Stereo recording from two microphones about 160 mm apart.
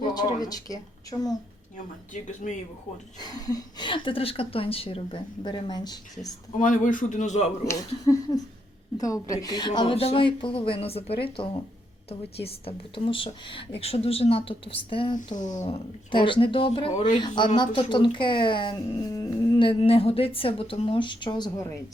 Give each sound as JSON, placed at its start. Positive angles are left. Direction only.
{"t": 0.1, "sound": "speech", "side_deg": 25}
{"t": 3.2, "sound": "speech", "side_deg": 25}
{"t": 6.6, "sound": "a man's voice", "side_deg": 55}
{"t": 7.6, "sound": "speech", "side_deg": 20}
{"t": 15.4, "sound": "a man's voice", "side_deg": 50}
{"t": 16.1, "sound": "speech", "side_deg": 30}
{"t": 19.5, "sound": "speech", "side_deg": 35}